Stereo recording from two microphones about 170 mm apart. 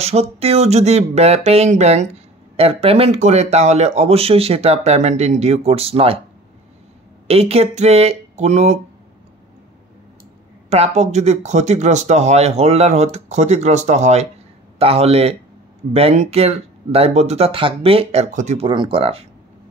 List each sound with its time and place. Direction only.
0.0 s speech: 40° right (ahead or behind)
7.2 s speech: 35° right (ahead or behind)
10.7 s speech: 40° right (ahead or behind)
18.7 s speech: 30° right (ahead or behind)